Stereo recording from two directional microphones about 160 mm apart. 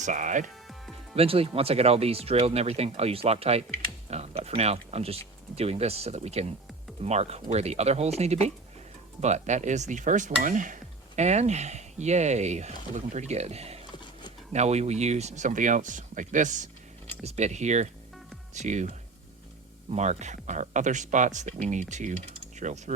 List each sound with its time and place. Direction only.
0.0 s speech: 50° right (ahead or behind)
1.1 s speech: 35° right (ahead or behind)
13.9 s computer keyboard: 30° left (ahead or behind)
14.5 s speech: 45° right (ahead or behind)
19.9 s speech: 45° right (ahead or behind)